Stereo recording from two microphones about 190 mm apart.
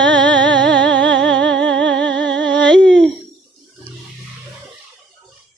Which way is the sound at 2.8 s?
5° left (ahead or behind).